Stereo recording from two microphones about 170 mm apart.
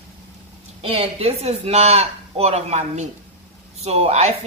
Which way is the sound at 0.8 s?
35° right (ahead or behind).